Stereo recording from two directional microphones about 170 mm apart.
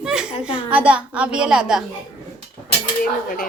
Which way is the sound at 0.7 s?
5° right (ahead or behind).